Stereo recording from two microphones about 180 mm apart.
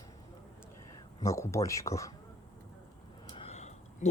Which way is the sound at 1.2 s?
15° left (ahead or behind).